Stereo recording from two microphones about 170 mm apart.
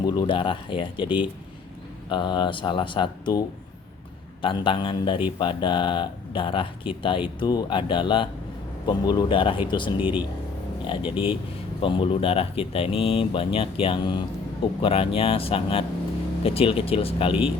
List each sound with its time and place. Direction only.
0.0 s a man's voice: 25° left (ahead or behind)
4.4 s a man's voice: 30° left (ahead or behind)